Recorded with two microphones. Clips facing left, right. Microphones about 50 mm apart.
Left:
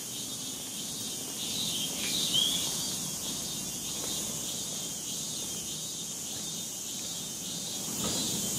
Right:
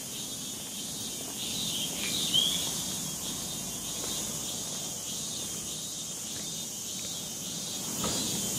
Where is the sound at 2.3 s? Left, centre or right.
Right.